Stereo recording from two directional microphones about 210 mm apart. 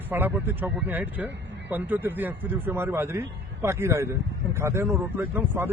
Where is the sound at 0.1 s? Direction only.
10° right (ahead or behind).